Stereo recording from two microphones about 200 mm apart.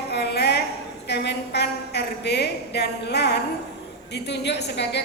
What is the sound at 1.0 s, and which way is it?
A woman's voice, 55° left (ahead or behind).